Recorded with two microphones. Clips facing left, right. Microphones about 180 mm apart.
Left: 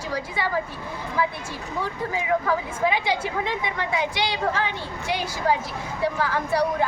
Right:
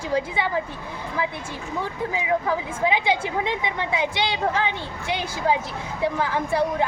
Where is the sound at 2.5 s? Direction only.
20° right (ahead or behind).